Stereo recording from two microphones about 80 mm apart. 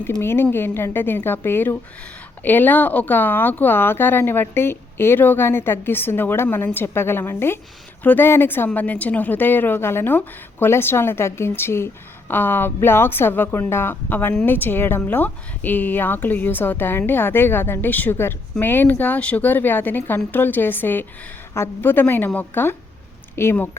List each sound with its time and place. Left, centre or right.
0.0 s speech: left